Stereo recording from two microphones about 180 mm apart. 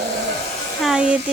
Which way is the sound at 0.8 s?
5° right (ahead or behind).